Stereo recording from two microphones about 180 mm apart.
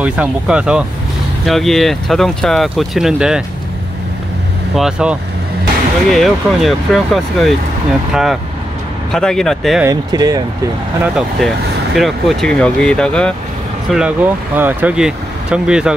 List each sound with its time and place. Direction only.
0.0 s speech: 5° right (ahead or behind)
4.7 s speech: 5° right (ahead or behind)
6.1 s speech: centre (ahead or behind)
9.8 s speech: 20° right (ahead or behind)
11.0 s speech: centre (ahead or behind)